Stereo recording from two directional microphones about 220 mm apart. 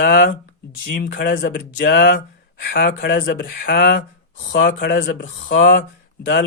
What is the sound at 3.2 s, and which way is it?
Speech, 40° left (ahead or behind).